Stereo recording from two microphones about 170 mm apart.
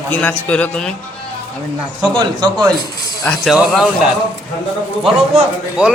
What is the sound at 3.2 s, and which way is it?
Speech, centre (ahead or behind).